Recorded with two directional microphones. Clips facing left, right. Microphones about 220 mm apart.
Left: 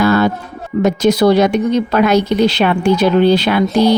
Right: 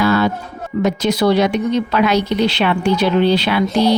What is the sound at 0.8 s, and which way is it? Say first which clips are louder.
Speech: left 4 dB; 45° left (ahead or behind).